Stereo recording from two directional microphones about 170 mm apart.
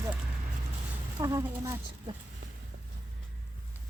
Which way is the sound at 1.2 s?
20° right (ahead or behind).